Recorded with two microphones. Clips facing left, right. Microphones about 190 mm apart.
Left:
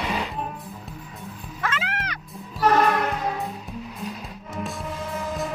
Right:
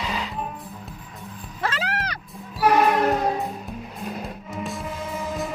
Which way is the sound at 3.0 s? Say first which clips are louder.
Right 5 dB; 40° right (ahead or behind).